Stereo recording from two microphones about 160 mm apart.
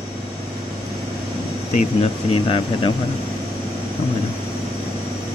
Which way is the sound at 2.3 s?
35° left (ahead or behind).